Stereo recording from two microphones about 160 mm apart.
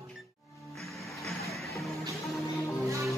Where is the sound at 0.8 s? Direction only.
Centre (ahead or behind).